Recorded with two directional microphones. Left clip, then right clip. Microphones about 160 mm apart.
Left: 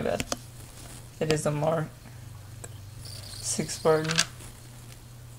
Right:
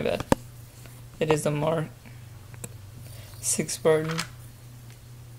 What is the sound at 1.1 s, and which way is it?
Speech, 25° right (ahead or behind).